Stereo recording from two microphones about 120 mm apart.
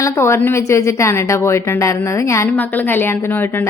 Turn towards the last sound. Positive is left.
turn(degrees=20)  # may be behind; listen again after turning